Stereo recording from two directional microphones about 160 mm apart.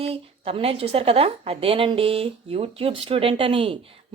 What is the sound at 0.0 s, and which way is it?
A woman's voice, 40° right (ahead or behind).